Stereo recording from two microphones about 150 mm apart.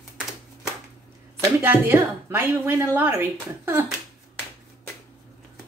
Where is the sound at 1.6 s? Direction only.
15° right (ahead or behind).